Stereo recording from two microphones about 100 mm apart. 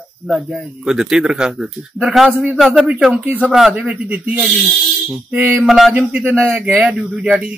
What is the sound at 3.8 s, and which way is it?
A man's voice, 15° right (ahead or behind).